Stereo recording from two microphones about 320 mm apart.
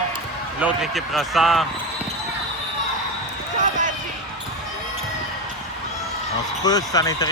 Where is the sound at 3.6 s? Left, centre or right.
Right.